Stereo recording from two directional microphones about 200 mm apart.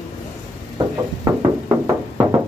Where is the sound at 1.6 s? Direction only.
15° right (ahead or behind).